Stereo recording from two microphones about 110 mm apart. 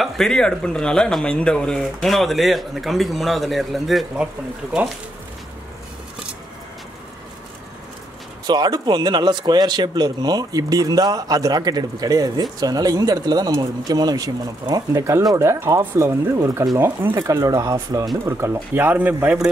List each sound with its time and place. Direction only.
0.0 s speech: 5° left (ahead or behind)
8.5 s speech: 40° right (ahead or behind); by 19.3 s 15° right (ahead or behind)